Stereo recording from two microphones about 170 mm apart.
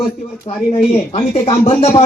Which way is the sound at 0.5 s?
35° left (ahead or behind).